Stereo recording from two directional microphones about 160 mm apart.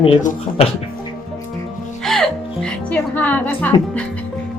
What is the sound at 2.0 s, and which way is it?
Music, 5° left (ahead or behind).